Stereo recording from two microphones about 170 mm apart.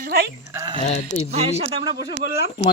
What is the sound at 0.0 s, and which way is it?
Speech, 65° right (ahead or behind).